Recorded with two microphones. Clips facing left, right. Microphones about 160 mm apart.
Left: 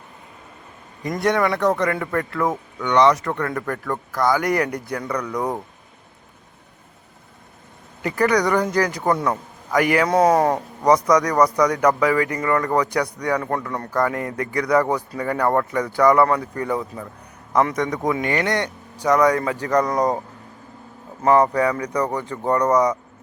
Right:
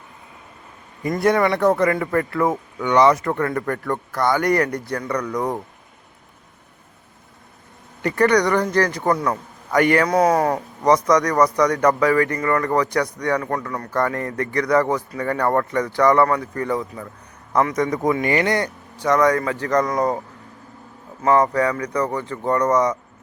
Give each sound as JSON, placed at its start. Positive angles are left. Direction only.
{"t": 1.0, "sound": "speech", "side_deg": -5}
{"t": 8.0, "sound": "speech", "side_deg": 5}
{"t": 10.1, "sound": "speech", "side_deg": 30}
{"t": 10.5, "sound": "speech", "side_deg": 10}
{"t": 17.7, "sound": "speech", "side_deg": 0}
{"t": 18.9, "sound": "speech", "side_deg": 10}
{"t": 21.2, "sound": "speech", "side_deg": 15}